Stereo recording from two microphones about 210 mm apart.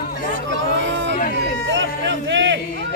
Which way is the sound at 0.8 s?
60° right (ahead or behind).